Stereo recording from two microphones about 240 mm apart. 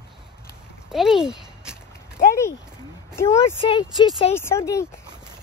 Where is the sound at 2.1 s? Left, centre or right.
Centre.